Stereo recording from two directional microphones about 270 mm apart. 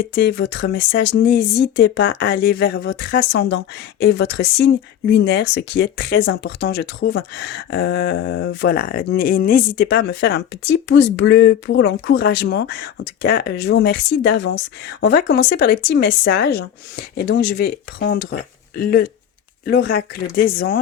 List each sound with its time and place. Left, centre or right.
0.0 s speech: left